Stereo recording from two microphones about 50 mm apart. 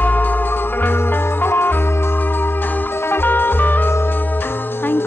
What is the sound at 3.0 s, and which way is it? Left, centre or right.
Music, left.